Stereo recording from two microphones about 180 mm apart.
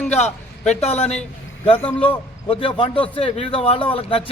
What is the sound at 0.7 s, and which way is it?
A man's voice, 35° left (ahead or behind).